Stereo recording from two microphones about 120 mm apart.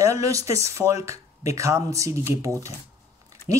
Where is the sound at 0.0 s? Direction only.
25° right (ahead or behind).